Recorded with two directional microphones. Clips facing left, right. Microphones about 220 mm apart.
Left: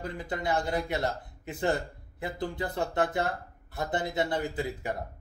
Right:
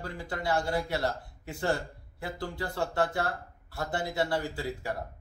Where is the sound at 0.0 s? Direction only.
20° left (ahead or behind).